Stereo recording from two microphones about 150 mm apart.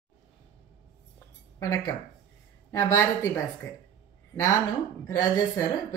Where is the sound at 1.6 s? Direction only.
25° left (ahead or behind).